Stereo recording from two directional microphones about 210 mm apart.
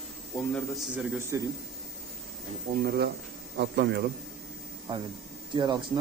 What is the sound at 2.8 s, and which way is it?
Speech, 45° right (ahead or behind).